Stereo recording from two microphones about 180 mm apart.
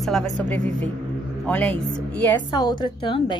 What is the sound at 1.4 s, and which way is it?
Speech, 10° left (ahead or behind).